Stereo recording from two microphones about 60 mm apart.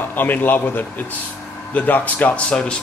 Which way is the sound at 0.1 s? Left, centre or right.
Left.